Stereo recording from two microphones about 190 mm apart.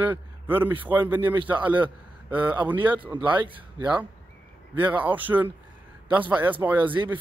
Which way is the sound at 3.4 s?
25° right (ahead or behind).